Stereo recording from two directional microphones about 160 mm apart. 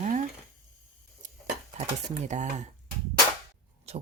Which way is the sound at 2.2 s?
50° right (ahead or behind).